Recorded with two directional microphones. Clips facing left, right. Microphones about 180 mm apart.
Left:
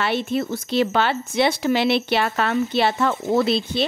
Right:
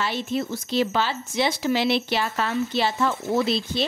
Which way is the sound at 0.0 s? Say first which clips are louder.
Left 4 dB; 60° left (ahead or behind).